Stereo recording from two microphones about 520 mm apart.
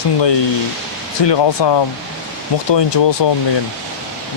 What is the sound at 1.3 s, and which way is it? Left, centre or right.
A man's voice, left.